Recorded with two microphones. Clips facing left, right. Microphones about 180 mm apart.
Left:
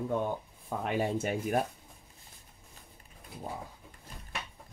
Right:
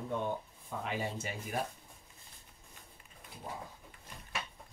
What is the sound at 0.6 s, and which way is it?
Speech, 55° left (ahead or behind).